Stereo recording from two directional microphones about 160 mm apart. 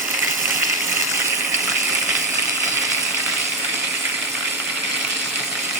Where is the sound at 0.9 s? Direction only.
15° right (ahead or behind).